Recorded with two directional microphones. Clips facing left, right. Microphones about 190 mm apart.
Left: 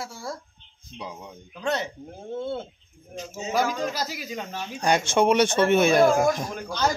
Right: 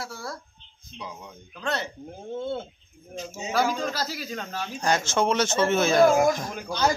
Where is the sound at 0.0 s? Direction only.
25° left (ahead or behind).